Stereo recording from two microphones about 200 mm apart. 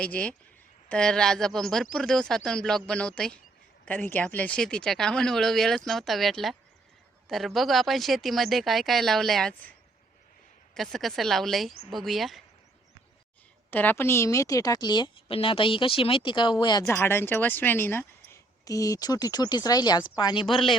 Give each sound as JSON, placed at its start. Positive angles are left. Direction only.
{"t": 0.0, "sound": "speech", "side_deg": 5}
{"t": 10.8, "sound": "speech", "side_deg": 0}
{"t": 13.7, "sound": "a woman's voice", "side_deg": 10}